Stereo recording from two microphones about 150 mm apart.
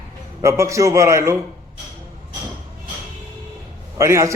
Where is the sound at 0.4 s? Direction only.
20° right (ahead or behind).